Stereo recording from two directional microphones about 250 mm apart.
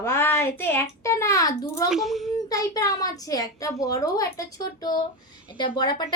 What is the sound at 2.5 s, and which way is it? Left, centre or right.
A woman's voice, centre.